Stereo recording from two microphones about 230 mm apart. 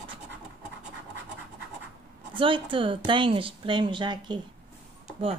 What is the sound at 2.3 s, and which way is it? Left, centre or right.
A woman's voice, right.